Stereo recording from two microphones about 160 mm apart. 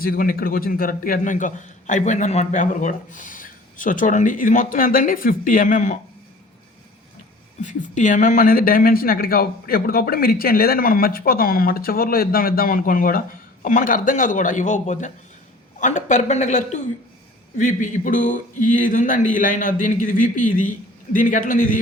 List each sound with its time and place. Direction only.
0.0 s speech: 65° left (ahead or behind)
7.6 s speech: 50° left (ahead or behind)